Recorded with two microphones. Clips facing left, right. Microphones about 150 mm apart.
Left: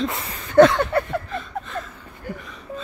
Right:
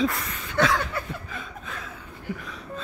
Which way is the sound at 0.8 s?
60° left (ahead or behind).